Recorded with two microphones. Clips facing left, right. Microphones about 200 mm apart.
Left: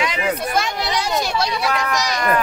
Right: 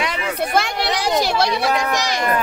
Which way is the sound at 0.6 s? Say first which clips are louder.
Right 1 dB; 65° right (ahead or behind).